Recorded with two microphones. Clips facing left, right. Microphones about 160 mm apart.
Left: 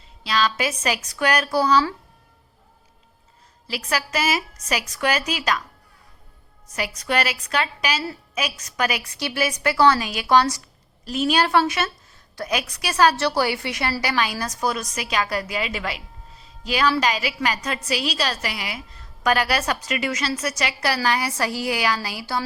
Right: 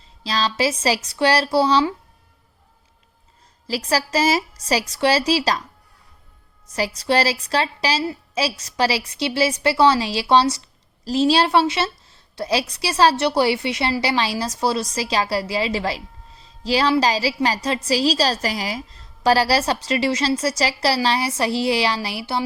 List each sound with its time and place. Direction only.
0.0 s a woman's voice: 35° right (ahead or behind)
3.7 s a woman's voice: 35° right (ahead or behind)
6.7 s a woman's voice: 35° right (ahead or behind)